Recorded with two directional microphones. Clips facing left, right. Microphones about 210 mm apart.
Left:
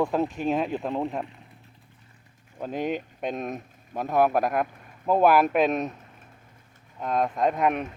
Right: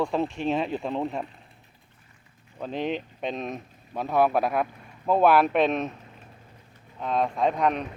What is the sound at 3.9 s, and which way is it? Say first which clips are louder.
Speech: even; 15° left (ahead or behind).